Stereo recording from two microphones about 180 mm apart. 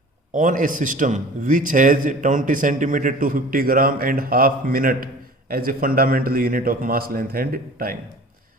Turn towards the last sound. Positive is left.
turn(degrees=-55)  # may be behind; listen again after turning